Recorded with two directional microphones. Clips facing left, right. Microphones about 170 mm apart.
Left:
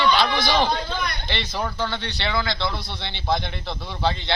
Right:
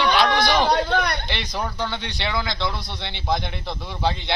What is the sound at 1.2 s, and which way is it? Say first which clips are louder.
Speech: even; 10° right (ahead or behind).